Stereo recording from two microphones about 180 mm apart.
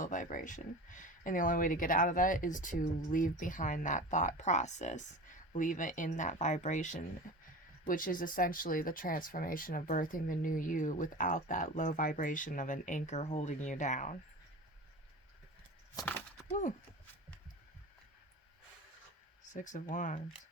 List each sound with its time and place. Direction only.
0.0 s speech: 45° left (ahead or behind)
16.5 s speech: 40° left (ahead or behind)
19.5 s speech: 45° left (ahead or behind)